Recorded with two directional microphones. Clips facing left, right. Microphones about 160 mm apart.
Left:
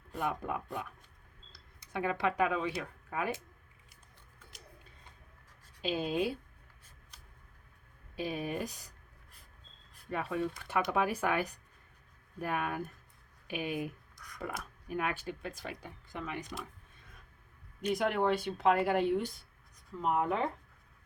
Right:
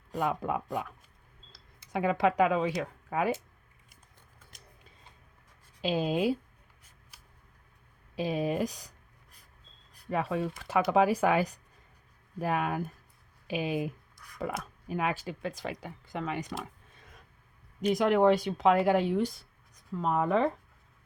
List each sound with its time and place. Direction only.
0.1 s speech: 90° right
1.9 s speech: 90° right
5.8 s speech: 90° right
7.1 s vehicle: 5° right (ahead or behind)
8.1 s speech: 90° right
10.1 s speech: 90° right
17.8 s speech: 90° right